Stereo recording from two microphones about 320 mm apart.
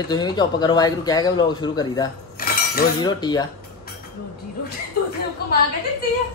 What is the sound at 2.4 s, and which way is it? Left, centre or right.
Cutlery, left.